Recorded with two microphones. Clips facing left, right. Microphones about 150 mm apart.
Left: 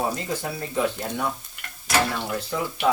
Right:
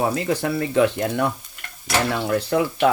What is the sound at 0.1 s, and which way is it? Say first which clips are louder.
Speech: right 7 dB; 70° right (ahead or behind).